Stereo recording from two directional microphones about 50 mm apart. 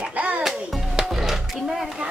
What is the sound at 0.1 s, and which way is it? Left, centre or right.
Music, right.